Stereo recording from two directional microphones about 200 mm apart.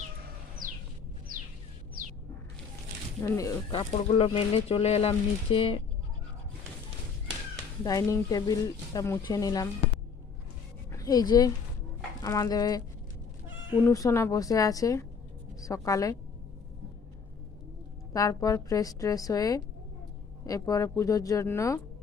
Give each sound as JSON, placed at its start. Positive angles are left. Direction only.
{"t": 3.2, "sound": "speech", "side_deg": 15}
{"t": 7.9, "sound": "speech", "side_deg": 15}
{"t": 10.9, "sound": "a woman's voice", "side_deg": 20}
{"t": 13.8, "sound": "speech", "side_deg": 15}
{"t": 18.1, "sound": "speech", "side_deg": 15}